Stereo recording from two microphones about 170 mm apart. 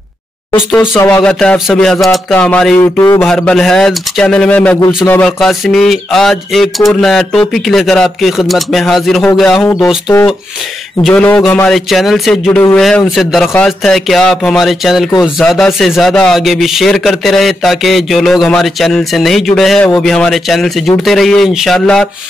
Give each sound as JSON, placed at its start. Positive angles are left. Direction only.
{"t": 0.7, "sound": "speech", "side_deg": 10}
{"t": 2.0, "sound": "a sound", "side_deg": 5}
{"t": 3.3, "sound": "speech", "side_deg": 5}
{"t": 11.0, "sound": "speech", "side_deg": 5}